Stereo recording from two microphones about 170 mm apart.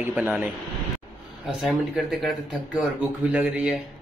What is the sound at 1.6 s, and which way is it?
Speech, centre (ahead or behind).